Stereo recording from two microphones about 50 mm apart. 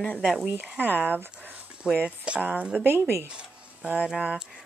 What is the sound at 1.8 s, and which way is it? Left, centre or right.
Speech, right.